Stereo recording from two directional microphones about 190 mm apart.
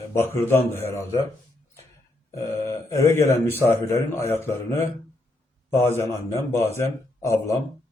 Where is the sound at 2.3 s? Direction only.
15° left (ahead or behind).